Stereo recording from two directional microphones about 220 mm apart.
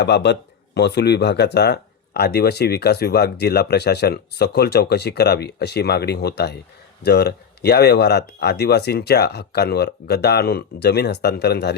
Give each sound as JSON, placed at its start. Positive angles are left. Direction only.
{"t": 0.0, "sound": "speech", "side_deg": 50}